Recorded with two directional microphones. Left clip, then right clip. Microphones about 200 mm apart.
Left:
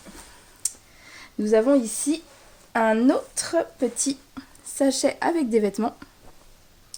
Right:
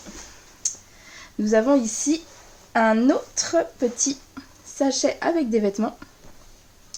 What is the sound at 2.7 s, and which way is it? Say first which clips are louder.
Speech: right 1 dB; 40° left (ahead or behind).